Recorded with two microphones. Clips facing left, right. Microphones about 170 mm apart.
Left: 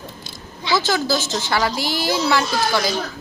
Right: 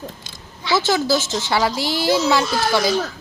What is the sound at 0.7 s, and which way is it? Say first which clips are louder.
Speech: right 2 dB; 25° right (ahead or behind).